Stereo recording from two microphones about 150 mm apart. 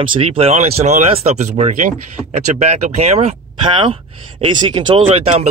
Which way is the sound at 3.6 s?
35° right (ahead or behind).